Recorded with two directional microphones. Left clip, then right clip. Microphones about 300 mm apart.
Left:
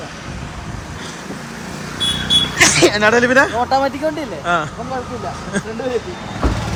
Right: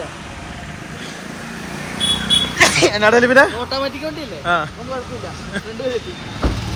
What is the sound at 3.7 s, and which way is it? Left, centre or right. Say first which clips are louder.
A man's voice: left 6 dB; centre.